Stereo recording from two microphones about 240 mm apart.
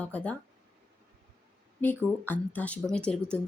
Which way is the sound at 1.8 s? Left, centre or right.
Centre.